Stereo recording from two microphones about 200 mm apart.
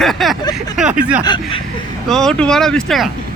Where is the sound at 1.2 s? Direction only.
25° left (ahead or behind).